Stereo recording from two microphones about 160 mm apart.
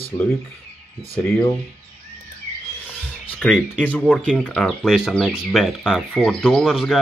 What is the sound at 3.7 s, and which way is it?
Speech, 10° left (ahead or behind).